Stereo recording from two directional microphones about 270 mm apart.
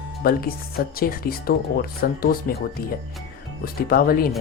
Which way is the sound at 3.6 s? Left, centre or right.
Left.